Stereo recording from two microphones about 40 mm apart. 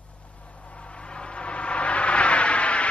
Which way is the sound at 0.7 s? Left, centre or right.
Left.